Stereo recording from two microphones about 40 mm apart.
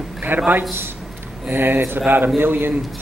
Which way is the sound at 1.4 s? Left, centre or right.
Right.